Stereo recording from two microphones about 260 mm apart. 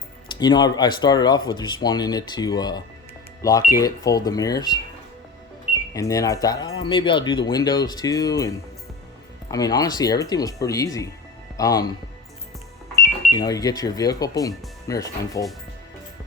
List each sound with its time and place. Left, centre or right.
0.3 s speech: centre
5.9 s speech: centre
13.3 s speech: centre